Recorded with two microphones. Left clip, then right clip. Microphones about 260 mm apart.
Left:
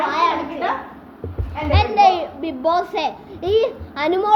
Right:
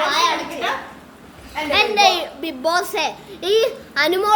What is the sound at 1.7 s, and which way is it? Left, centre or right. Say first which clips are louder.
A child's voice: left 1 dB; centre.